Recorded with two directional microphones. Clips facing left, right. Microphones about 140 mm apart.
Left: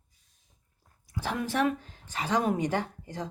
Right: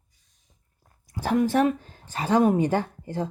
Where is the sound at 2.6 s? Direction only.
30° right (ahead or behind).